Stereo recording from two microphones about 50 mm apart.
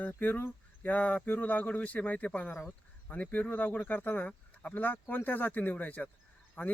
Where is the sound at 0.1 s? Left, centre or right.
Left.